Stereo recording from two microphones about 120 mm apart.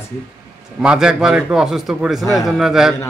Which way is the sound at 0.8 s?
5° right (ahead or behind).